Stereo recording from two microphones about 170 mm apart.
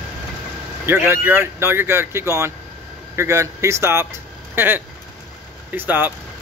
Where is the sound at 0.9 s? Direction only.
15° right (ahead or behind).